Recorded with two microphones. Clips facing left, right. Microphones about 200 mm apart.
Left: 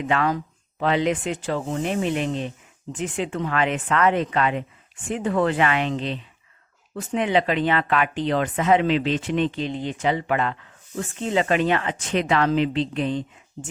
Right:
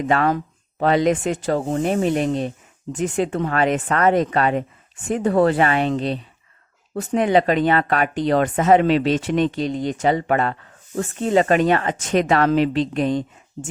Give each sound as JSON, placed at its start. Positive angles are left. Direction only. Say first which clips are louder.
{"t": 0.0, "sound": "speech", "louder": "right 4 dB", "side_deg": -45}